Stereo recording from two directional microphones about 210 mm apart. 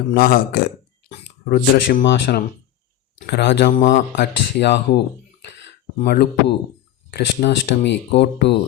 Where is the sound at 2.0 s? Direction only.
55° left (ahead or behind).